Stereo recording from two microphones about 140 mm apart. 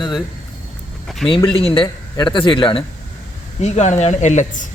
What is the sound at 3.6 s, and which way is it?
Speech, 55° left (ahead or behind).